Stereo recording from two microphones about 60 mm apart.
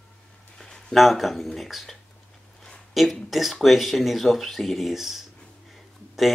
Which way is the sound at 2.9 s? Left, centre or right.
Centre.